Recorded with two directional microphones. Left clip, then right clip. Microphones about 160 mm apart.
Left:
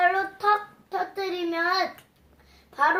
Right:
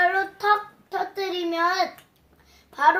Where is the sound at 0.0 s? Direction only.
5° right (ahead or behind).